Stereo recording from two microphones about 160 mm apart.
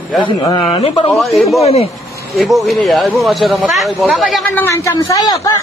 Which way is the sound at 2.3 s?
Centre (ahead or behind).